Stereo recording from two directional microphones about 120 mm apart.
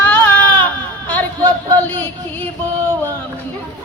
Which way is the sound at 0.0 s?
15° left (ahead or behind).